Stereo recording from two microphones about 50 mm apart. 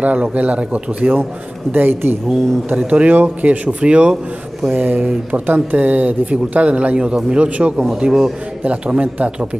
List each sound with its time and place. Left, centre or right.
0.0 s speech: right
1.7 s speech: right
2.7 s speech: right
4.7 s speech: right
8.0 s a man's voice: centre
8.6 s speech: right